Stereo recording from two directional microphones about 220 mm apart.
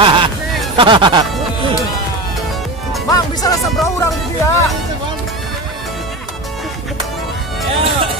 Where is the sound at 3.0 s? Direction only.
15° left (ahead or behind).